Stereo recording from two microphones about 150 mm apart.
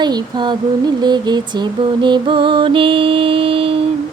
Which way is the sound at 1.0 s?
30° right (ahead or behind).